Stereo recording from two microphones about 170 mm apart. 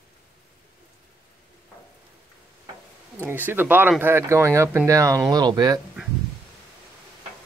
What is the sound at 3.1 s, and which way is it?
Speech, 10° right (ahead or behind).